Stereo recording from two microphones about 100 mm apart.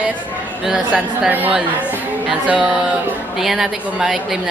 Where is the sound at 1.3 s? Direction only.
20° right (ahead or behind).